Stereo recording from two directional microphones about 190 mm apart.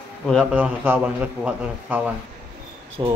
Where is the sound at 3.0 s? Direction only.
20° right (ahead or behind).